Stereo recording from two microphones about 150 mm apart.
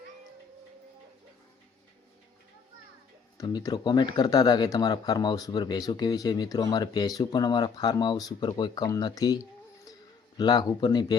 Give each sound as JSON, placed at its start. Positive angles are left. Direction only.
{"t": 3.3, "sound": "speech", "side_deg": 25}